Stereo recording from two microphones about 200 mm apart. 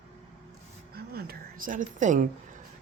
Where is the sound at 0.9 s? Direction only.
50° right (ahead or behind).